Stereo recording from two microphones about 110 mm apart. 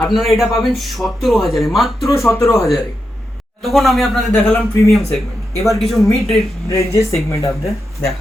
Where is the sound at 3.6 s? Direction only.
Centre (ahead or behind).